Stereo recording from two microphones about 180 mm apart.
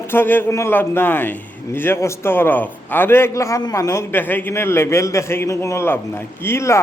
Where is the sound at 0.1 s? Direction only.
10° left (ahead or behind).